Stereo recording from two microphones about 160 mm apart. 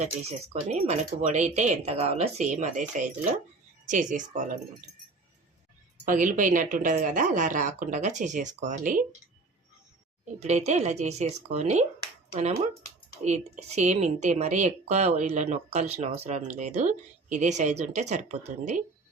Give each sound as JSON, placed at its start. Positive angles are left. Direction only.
{"t": 0.0, "sound": "speech", "side_deg": -40}
{"t": 6.1, "sound": "speech", "side_deg": -55}
{"t": 10.4, "sound": "speech", "side_deg": -45}